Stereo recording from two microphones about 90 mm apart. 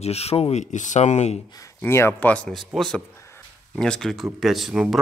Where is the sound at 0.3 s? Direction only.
50° left (ahead or behind).